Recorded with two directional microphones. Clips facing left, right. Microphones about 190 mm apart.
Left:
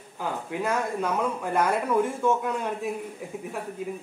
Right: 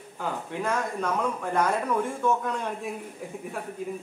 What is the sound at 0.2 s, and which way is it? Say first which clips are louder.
Speech: left 1 dB; 5° left (ahead or behind).